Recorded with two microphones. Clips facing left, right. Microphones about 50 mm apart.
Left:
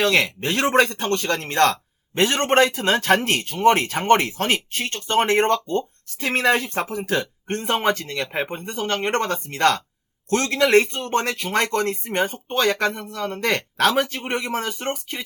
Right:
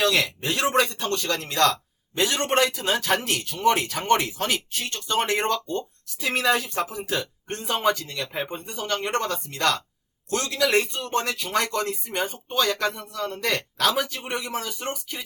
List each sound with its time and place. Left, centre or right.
0.0 s speech: left